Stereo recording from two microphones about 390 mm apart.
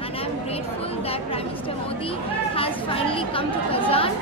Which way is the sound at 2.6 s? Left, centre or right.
Centre.